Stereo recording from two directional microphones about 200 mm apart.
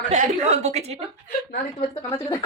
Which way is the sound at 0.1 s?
35° right (ahead or behind).